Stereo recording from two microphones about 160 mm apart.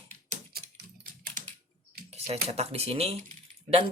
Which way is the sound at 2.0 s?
40° right (ahead or behind).